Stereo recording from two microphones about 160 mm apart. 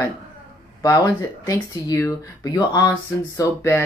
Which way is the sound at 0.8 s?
20° left (ahead or behind).